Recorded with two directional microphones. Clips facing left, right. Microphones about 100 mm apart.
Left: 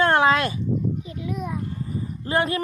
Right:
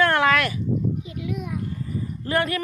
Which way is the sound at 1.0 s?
35° left (ahead or behind).